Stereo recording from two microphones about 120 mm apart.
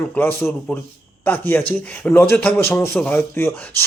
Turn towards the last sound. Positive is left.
turn(degrees=20)  # may be behind; listen again after turning